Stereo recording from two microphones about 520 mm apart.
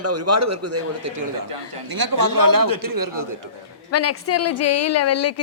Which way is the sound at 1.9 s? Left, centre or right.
Right.